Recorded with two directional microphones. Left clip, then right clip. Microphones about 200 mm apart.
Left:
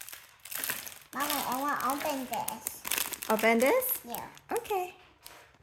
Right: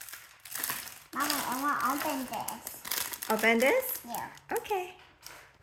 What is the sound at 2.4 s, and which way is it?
Speech, 30° left (ahead or behind).